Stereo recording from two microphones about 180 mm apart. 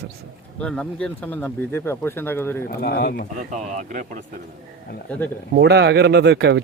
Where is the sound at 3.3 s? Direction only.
40° right (ahead or behind).